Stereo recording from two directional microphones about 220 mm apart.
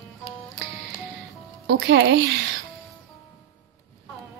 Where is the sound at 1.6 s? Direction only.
50° right (ahead or behind).